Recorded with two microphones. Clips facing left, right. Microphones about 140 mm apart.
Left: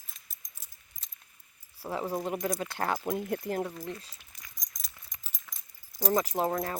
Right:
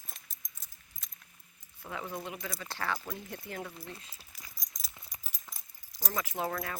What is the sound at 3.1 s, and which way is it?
Speech, 55° left (ahead or behind).